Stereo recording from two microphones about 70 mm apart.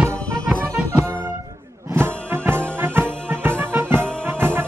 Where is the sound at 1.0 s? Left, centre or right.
Right.